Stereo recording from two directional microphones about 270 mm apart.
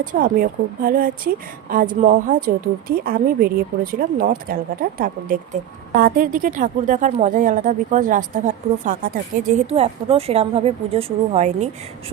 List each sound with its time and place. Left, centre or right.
0.0 s a woman's voice: right